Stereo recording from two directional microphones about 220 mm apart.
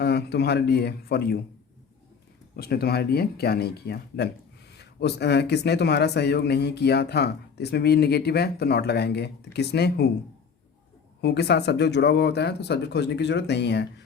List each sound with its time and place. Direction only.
0.0 s speech: 50° left (ahead or behind)
2.6 s speech: 45° left (ahead or behind)
11.2 s speech: 50° left (ahead or behind)